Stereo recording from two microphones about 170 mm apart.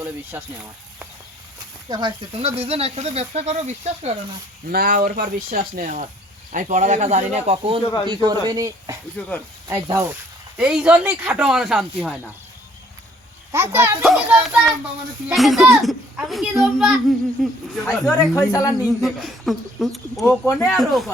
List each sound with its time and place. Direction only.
0.0 s speech: 10° right (ahead or behind)
1.9 s speech: 25° right (ahead or behind)
4.7 s speech: 60° right (ahead or behind); by 10.1 s 20° right (ahead or behind)
10.6 s a child's voice: 5° right (ahead or behind)
13.5 s speech: 15° right (ahead or behind)
14.0 s a child's voice: 5° right (ahead or behind)
17.8 s speech: 15° left (ahead or behind)
19.0 s a child's voice: centre (ahead or behind)
20.4 s speech: 15° left (ahead or behind)
20.7 s a child's voice: centre (ahead or behind)